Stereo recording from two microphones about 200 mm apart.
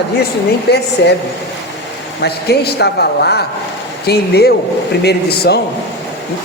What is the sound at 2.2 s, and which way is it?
A man's voice, 55° left (ahead or behind).